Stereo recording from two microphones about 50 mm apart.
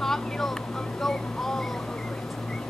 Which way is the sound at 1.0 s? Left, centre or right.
Centre.